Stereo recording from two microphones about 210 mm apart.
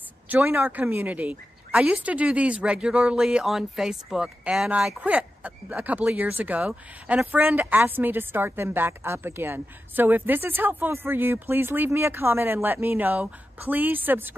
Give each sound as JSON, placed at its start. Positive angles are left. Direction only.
{"t": 0.3, "sound": "speech", "side_deg": -10}